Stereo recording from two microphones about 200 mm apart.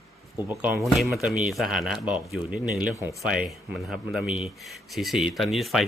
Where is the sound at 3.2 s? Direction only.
Centre (ahead or behind).